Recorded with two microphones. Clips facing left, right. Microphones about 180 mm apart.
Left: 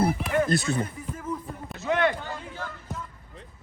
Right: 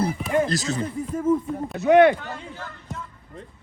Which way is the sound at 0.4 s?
55° left (ahead or behind).